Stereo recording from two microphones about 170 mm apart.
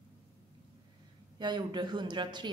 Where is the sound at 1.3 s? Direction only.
25° right (ahead or behind).